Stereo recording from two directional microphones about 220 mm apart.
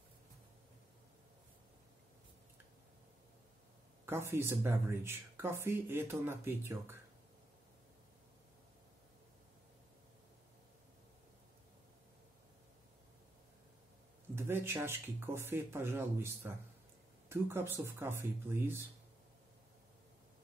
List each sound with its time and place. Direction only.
4.0 s speech: 10° right (ahead or behind)
14.3 s speech: 10° right (ahead or behind)